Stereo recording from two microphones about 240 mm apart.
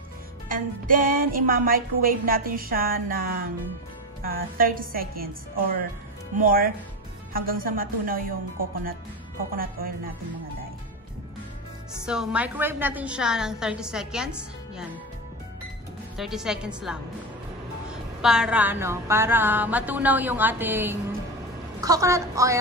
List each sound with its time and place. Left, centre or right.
0.5 s speech: right
12.1 s a woman's voice: centre
16.2 s a woman's voice: centre
18.2 s a woman's voice: centre